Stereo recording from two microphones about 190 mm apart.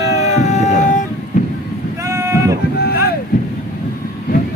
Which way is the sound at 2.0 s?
15° right (ahead or behind).